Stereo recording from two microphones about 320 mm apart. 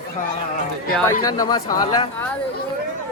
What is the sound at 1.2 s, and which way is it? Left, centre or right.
Speech, centre.